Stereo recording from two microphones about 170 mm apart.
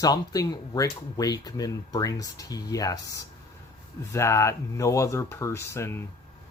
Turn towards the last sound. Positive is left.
turn(degrees=15)  # may be behind; listen again after turning